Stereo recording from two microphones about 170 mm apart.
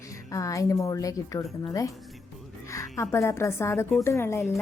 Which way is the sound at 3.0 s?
15° left (ahead or behind).